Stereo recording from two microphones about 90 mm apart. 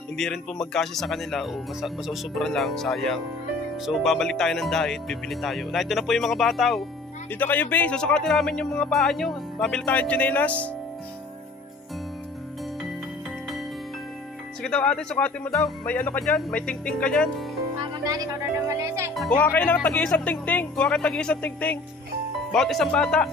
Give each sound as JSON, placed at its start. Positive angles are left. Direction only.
{"t": 0.2, "sound": "speech", "side_deg": 5}
{"t": 7.3, "sound": "speech", "side_deg": 20}
{"t": 7.9, "sound": "speech", "side_deg": 10}
{"t": 14.6, "sound": "speech", "side_deg": 10}
{"t": 15.9, "sound": "speech", "side_deg": 15}
{"t": 17.9, "sound": "speech", "side_deg": -45}
{"t": 18.7, "sound": "speech", "side_deg": -30}
{"t": 19.5, "sound": "speech", "side_deg": 15}
{"t": 20.8, "sound": "speech", "side_deg": 10}
{"t": 22.5, "sound": "speech", "side_deg": 5}